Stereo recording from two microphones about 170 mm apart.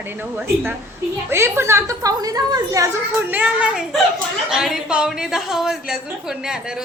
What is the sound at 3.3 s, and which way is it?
A woman's voice, 5° right (ahead or behind).